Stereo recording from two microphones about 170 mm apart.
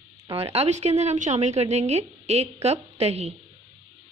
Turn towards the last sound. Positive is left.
turn(degrees=-40)  # may be behind; listen again after turning